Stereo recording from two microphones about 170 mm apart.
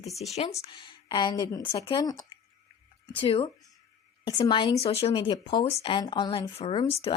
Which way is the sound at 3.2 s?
30° left (ahead or behind).